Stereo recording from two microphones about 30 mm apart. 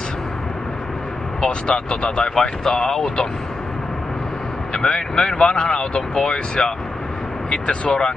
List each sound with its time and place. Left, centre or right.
1.4 s speech: left
2.7 s speech: centre
4.7 s speech: left